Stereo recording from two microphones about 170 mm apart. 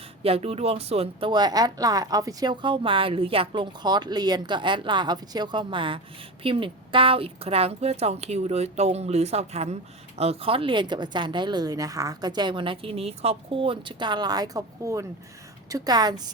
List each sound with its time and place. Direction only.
0.2 s a woman's voice: 35° right (ahead or behind)
1.3 s a woman's voice: 25° right (ahead or behind)